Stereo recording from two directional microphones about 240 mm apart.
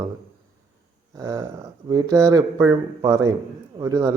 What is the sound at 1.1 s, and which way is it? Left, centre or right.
Speech, centre.